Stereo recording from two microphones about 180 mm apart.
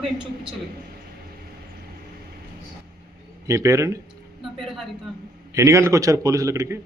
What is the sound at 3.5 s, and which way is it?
Speech, 15° right (ahead or behind).